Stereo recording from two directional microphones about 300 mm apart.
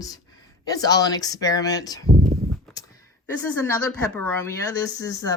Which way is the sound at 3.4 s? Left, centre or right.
Centre.